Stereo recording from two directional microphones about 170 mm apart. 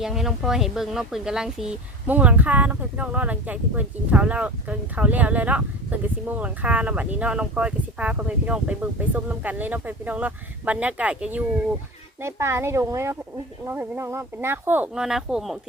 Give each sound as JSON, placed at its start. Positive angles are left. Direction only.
{"t": 0.0, "sound": "speech", "side_deg": 0}